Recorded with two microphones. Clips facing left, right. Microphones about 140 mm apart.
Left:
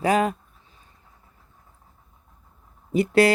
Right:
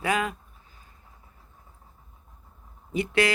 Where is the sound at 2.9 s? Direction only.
40° left (ahead or behind).